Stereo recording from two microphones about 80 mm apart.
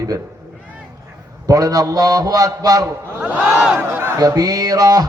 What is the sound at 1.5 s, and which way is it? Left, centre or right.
A man's voice, right.